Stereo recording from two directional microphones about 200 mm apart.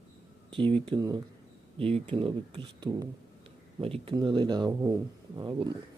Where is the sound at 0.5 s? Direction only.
25° right (ahead or behind).